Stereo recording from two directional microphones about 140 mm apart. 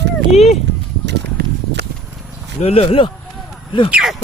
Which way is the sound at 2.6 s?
45° left (ahead or behind).